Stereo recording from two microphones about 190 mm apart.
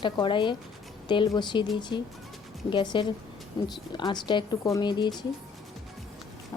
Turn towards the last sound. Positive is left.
turn(degrees=25)  # may be behind; listen again after turning